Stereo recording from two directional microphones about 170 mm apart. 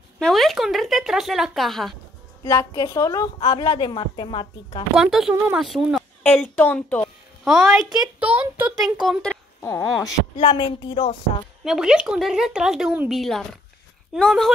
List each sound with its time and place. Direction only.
0.2 s speech: centre (ahead or behind)
2.4 s a woman's voice: 15° left (ahead or behind)
4.9 s a woman's voice: centre (ahead or behind)
7.4 s a child's voice: centre (ahead or behind)
9.6 s a woman's voice: 20° left (ahead or behind)
11.6 s speech: 5° right (ahead or behind)